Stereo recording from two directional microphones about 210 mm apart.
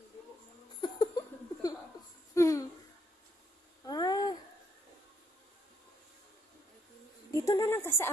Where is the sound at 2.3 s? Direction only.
15° left (ahead or behind).